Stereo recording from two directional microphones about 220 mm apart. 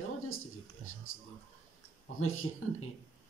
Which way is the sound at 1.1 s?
65° left (ahead or behind).